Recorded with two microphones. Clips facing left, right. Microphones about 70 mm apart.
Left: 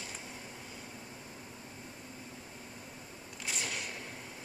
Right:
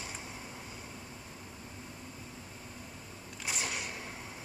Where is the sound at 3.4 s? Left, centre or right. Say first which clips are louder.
Right 2 dB; centre.